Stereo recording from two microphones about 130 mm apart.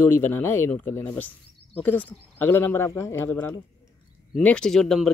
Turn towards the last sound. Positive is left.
turn(degrees=5)  # may be behind; listen again after turning